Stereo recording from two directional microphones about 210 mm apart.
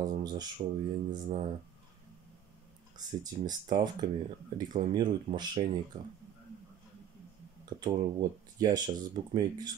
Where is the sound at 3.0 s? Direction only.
20° right (ahead or behind).